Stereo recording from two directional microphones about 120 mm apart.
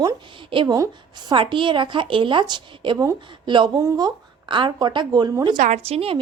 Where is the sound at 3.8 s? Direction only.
30° right (ahead or behind).